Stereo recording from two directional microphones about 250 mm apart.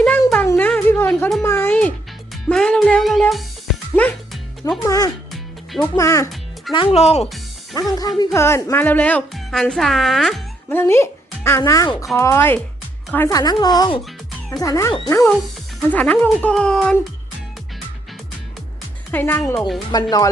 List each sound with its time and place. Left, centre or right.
0.0 s a sound: centre
2.3 s music: centre
4.9 s music: centre
5.3 s music: centre
5.9 s speech: centre
6.7 s speech: left
7.8 s speech: centre
19.1 s speech: centre
19.9 s speech: centre